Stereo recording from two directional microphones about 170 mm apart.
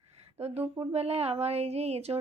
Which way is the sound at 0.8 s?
35° right (ahead or behind).